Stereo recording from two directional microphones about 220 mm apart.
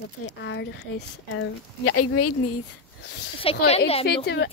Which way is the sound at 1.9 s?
90° left.